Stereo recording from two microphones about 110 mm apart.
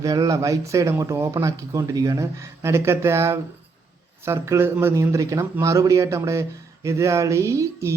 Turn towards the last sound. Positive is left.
turn(degrees=-25)  # may be behind; listen again after turning